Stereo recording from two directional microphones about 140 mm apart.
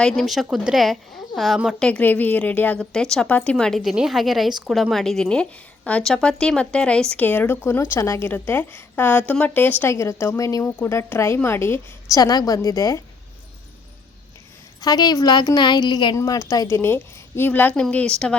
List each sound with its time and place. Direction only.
0.0 s speech: centre (ahead or behind)
1.9 s a woman's voice: 10° left (ahead or behind)
14.8 s a woman's voice: 30° left (ahead or behind); by 18.3 s 5° left (ahead or behind)